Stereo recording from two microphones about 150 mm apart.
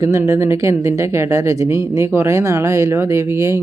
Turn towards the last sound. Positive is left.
turn(degrees=-20)  # may be behind; listen again after turning